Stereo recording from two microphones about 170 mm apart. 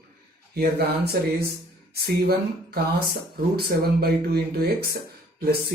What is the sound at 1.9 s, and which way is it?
Speech, 70° right (ahead or behind).